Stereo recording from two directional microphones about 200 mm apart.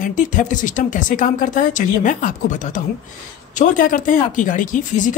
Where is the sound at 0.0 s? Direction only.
40° left (ahead or behind).